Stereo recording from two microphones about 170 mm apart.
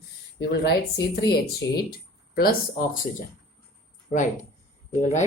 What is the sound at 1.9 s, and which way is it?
Speech, 60° left (ahead or behind).